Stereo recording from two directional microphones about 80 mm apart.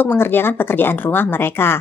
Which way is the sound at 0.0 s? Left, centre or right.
Left.